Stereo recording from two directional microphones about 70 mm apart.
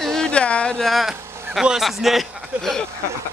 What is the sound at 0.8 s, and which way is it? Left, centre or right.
Speech, centre.